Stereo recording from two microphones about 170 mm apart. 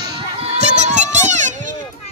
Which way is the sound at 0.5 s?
40° right (ahead or behind).